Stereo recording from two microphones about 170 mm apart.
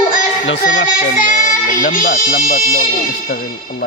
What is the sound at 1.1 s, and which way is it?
Speech, 50° left (ahead or behind).